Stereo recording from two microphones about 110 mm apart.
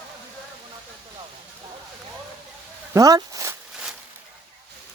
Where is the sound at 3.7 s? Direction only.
5° right (ahead or behind).